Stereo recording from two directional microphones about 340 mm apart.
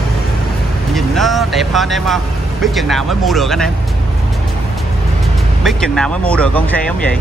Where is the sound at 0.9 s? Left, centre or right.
Centre.